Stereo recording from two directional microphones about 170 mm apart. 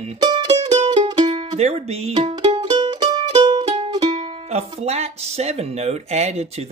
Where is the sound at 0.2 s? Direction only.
25° right (ahead or behind).